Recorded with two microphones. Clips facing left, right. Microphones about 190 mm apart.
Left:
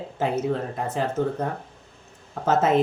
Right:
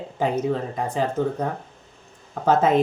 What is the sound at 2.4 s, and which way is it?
Speech, 5° left (ahead or behind).